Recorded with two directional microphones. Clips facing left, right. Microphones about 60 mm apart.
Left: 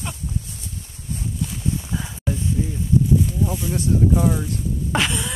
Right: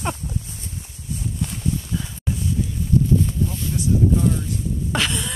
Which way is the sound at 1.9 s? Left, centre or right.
Left.